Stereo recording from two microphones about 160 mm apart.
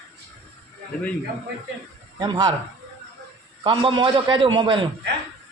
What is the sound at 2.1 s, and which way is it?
Speech, 25° right (ahead or behind).